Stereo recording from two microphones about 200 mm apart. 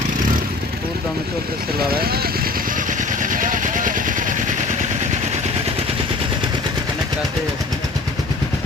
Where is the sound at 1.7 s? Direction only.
50° right (ahead or behind); by 5.7 s 30° right (ahead or behind).